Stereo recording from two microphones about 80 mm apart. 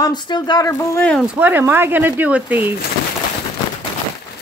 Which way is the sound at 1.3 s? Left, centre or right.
Right.